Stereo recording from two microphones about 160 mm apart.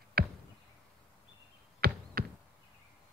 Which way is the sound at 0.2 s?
70° right (ahead or behind).